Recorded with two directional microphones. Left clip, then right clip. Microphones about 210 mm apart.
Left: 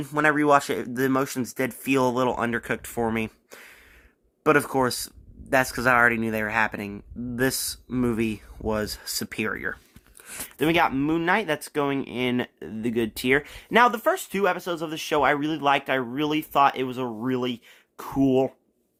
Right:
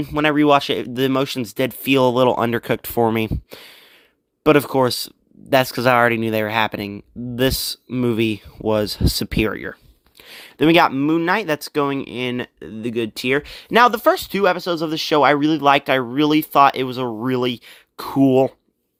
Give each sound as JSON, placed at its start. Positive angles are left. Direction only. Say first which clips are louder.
{"t": 0.0, "sound": "speech", "louder": "right 4 dB", "side_deg": -25}
{"t": 5.0, "sound": "speech", "louder": "right 8 dB", "side_deg": -30}
{"t": 7.3, "sound": "speech", "louder": "right 6 dB", "side_deg": -30}
{"t": 8.1, "sound": "speech", "louder": "right 7 dB", "side_deg": -45}
{"t": 10.6, "sound": "speech", "louder": "right 8 dB", "side_deg": -30}
{"t": 10.9, "sound": "speech", "louder": "right 5 dB", "side_deg": -15}